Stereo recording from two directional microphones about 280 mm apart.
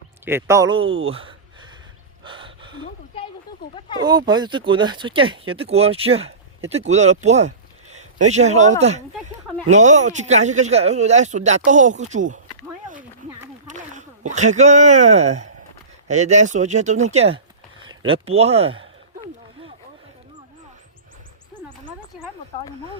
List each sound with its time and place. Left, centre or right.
0.3 s speech: centre
2.2 s gasp: centre
3.8 s speech: centre
4.0 s speech: centre
13.7 s speech: right